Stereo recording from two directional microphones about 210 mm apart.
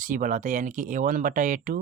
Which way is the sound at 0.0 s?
40° right (ahead or behind).